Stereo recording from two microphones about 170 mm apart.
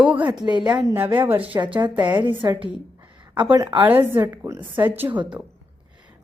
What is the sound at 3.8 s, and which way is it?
A woman's voice, 10° right (ahead or behind).